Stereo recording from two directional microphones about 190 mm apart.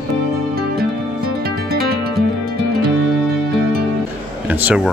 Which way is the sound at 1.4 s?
55° right (ahead or behind).